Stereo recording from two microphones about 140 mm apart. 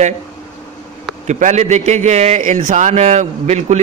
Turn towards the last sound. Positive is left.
turn(degrees=-55)  # may be behind; listen again after turning